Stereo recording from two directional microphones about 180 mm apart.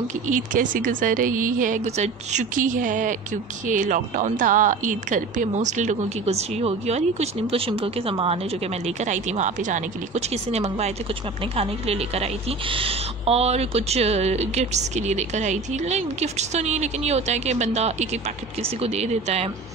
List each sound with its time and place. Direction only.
0.3 s a woman's voice: 45° right (ahead or behind)